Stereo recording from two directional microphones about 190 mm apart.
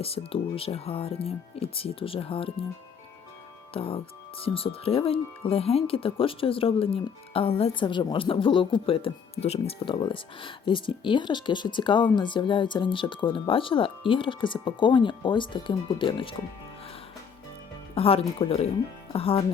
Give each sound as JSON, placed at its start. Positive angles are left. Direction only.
{"t": 0.0, "sound": "speech", "side_deg": 30}
{"t": 3.8, "sound": "speech", "side_deg": 30}
{"t": 17.9, "sound": "speech", "side_deg": 30}